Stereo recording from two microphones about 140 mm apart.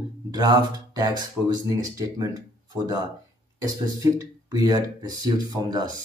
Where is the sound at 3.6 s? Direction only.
25° right (ahead or behind).